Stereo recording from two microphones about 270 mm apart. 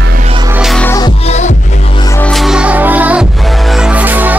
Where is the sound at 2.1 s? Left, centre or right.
Centre.